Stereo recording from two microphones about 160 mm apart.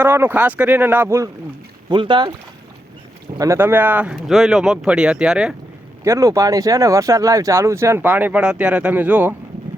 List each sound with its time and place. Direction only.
0.0 s speech: 15° right (ahead or behind)
1.9 s speech: 30° right (ahead or behind)
3.3 s speech: 20° right (ahead or behind); by 5.5 s 5° right (ahead or behind)
6.1 s speech: 20° right (ahead or behind)